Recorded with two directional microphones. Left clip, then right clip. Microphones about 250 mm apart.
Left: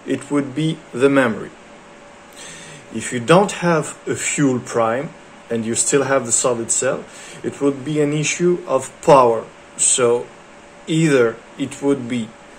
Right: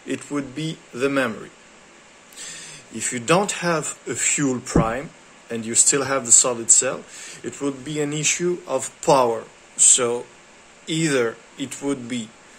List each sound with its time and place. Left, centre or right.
0.1 s speech: centre
2.4 s speech: centre